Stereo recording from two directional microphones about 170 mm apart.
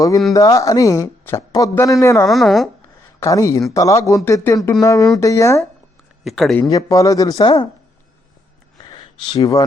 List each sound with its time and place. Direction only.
0.3 s speech: 20° left (ahead or behind)
2.2 s speech: centre (ahead or behind)
3.2 s speech: 15° left (ahead or behind)
6.2 s speech: centre (ahead or behind)
6.6 s speech: 20° left (ahead or behind)
8.8 s a sound: 25° left (ahead or behind)